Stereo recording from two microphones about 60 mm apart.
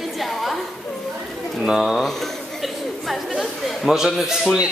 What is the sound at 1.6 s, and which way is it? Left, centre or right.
Speech, centre.